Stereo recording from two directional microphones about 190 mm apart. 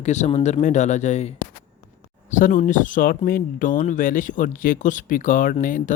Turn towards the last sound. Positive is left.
turn(degrees=45)  # may be behind; listen again after turning